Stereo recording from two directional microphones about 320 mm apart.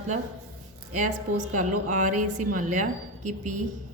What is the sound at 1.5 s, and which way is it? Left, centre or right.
A woman's voice, right.